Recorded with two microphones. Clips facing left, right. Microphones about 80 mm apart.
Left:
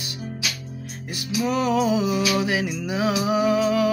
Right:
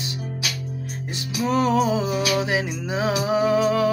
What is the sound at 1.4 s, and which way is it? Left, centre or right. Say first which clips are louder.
Music: right 2 dB; right.